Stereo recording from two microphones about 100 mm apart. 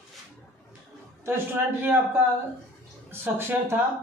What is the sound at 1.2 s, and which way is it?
A man's voice, 20° right (ahead or behind).